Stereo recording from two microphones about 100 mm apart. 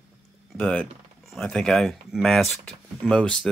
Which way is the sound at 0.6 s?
15° left (ahead or behind).